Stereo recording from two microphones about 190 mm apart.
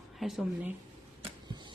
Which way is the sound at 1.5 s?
25° right (ahead or behind).